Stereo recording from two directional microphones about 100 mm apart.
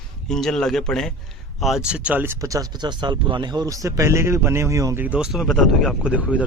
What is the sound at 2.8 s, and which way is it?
A man's voice, 50° right (ahead or behind).